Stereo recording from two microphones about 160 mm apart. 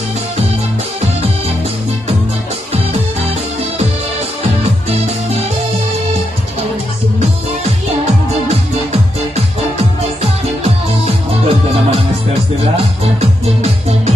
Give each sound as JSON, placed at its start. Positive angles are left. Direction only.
{"t": 11.1, "sound": "music", "side_deg": -40}